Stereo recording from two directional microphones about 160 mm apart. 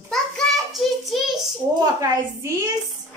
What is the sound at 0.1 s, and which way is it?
Child singing, centre (ahead or behind).